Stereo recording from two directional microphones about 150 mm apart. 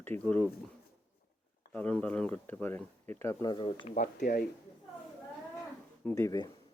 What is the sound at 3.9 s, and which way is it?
Speech, 65° left (ahead or behind).